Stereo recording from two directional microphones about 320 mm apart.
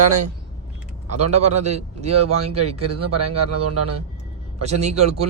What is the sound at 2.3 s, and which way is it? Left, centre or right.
A man's voice, right.